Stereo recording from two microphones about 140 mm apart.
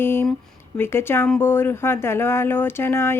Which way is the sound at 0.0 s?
15° left (ahead or behind).